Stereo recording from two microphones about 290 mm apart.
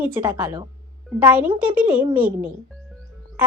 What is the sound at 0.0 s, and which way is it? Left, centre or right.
Speech, centre.